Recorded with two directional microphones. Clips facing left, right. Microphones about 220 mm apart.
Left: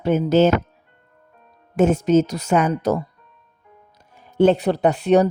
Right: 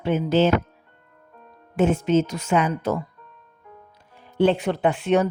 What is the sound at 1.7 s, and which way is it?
Speech, 40° left (ahead or behind).